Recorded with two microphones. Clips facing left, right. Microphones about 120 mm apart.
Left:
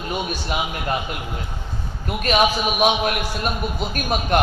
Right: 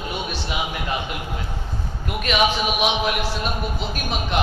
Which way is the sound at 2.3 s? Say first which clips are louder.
Left 2 dB; 45° left (ahead or behind).